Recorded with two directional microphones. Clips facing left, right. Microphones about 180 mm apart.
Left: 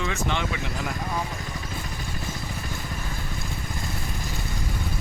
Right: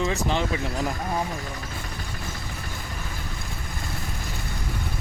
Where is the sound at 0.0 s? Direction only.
35° right (ahead or behind).